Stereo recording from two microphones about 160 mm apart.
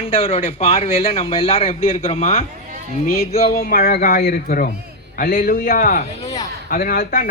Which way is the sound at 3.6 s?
70° left (ahead or behind).